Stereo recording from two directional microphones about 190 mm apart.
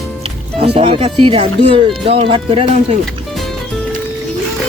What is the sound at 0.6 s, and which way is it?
Speech, 30° right (ahead or behind).